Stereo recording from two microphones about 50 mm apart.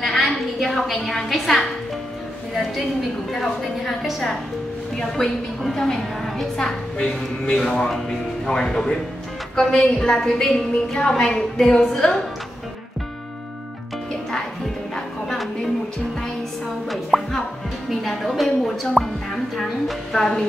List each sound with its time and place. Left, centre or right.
0.0 s a sound: centre
2.5 s a woman's voice: centre
4.9 s a woman's voice: centre
16.9 s music: centre